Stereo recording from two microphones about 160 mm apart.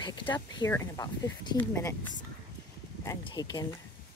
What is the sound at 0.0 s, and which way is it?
Speech, 30° left (ahead or behind).